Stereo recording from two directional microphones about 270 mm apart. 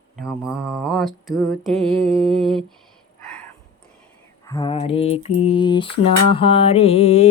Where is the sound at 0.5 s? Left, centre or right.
Centre.